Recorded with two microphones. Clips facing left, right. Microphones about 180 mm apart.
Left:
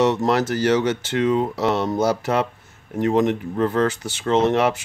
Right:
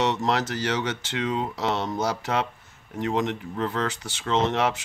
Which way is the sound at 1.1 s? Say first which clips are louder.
Left 8 dB; 50° left (ahead or behind).